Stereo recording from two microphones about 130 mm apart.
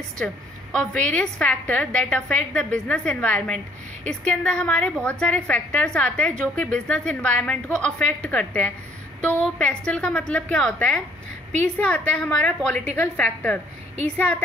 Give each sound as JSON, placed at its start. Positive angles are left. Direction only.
{"t": 0.2, "sound": "a woman's voice", "side_deg": 5}